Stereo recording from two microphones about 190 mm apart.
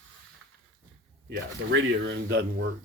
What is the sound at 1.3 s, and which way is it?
Speech, 70° right (ahead or behind).